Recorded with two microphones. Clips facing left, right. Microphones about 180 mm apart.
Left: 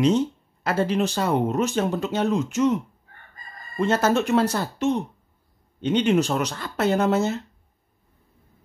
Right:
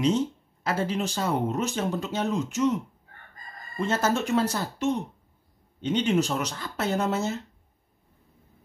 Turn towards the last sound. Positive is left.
turn(degrees=65)  # may be behind; listen again after turning